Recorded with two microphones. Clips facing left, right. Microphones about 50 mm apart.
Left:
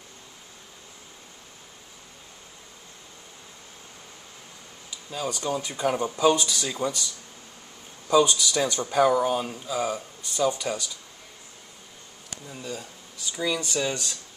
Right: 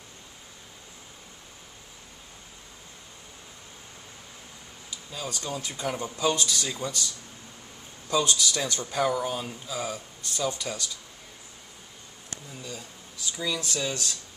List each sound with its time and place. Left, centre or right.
5.1 s speech: centre
8.1 s speech: centre
12.4 s speech: centre